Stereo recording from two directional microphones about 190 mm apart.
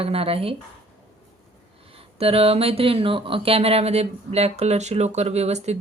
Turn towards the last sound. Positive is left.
turn(degrees=-35)  # may be behind; listen again after turning